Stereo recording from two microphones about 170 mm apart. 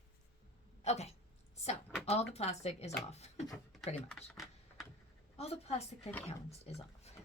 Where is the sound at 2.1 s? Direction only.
40° left (ahead or behind).